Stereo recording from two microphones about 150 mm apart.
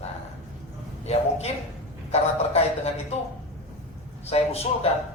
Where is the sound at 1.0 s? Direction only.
45° left (ahead or behind).